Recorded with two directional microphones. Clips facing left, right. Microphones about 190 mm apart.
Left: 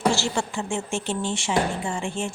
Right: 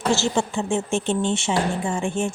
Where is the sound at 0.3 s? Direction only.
20° right (ahead or behind).